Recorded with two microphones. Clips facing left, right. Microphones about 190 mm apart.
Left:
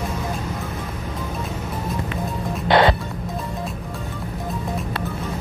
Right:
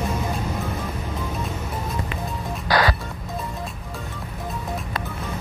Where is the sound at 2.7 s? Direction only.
25° left (ahead or behind).